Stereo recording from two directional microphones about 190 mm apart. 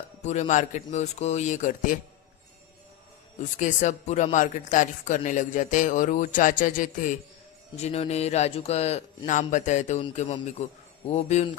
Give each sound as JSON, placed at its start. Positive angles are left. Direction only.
{"t": 0.2, "sound": "a man's voice", "side_deg": 35}
{"t": 3.6, "sound": "a man's voice", "side_deg": 40}